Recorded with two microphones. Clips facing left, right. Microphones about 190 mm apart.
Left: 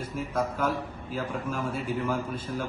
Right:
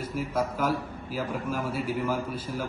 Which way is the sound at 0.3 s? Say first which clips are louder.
Even; 5° right (ahead or behind).